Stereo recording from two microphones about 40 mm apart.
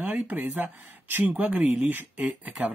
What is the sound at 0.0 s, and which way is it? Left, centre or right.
Speech, right.